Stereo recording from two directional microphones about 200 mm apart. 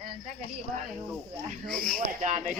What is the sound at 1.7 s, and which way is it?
Speech, 45° right (ahead or behind).